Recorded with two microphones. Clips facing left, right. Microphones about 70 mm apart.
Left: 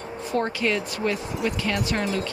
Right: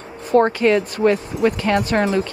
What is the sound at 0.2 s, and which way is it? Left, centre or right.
Speech, right.